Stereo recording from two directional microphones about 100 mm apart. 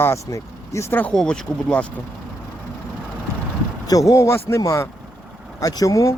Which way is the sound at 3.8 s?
35° left (ahead or behind).